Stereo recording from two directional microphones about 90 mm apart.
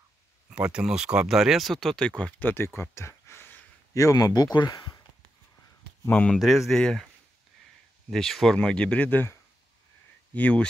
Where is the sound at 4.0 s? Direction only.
40° left (ahead or behind).